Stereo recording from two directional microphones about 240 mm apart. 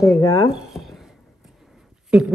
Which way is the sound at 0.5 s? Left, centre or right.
Centre.